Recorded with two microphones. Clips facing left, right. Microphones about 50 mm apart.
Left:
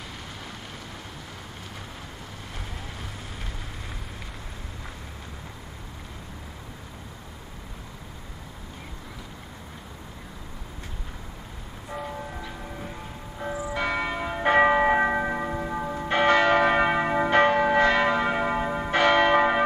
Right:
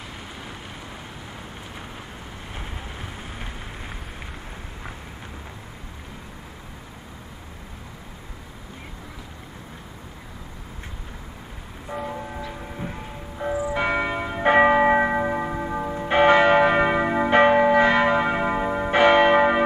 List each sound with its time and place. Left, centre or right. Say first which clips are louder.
2.5 s vehicle: right 3 dB; right
11.9 s church bell: right 3 dB; centre